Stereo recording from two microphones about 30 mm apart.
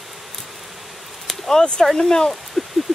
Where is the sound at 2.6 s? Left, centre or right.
Centre.